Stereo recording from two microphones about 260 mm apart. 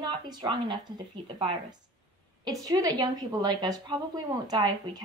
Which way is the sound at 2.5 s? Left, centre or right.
Centre.